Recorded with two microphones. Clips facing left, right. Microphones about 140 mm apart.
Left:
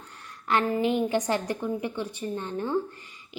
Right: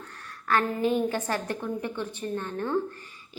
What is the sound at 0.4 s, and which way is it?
A woman's voice, 15° left (ahead or behind).